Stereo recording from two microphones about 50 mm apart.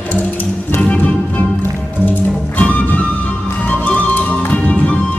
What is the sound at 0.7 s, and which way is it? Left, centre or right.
Music, left.